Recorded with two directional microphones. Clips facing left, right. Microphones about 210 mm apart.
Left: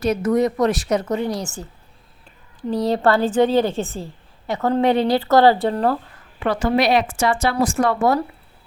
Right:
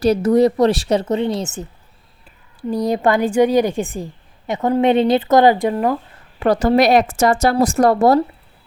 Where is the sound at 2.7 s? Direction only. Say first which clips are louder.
Right 1 dB; 15° right (ahead or behind).